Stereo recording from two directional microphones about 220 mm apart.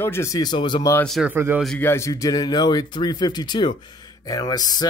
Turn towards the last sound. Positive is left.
turn(degrees=15)  # may be behind; listen again after turning